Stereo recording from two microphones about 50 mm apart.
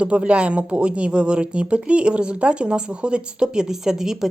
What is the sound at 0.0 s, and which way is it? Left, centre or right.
A woman's voice, right.